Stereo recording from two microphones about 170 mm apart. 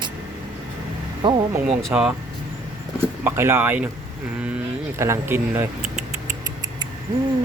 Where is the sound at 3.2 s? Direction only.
15° right (ahead or behind).